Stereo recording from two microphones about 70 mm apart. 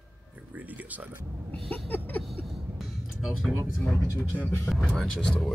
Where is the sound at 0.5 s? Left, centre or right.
Right.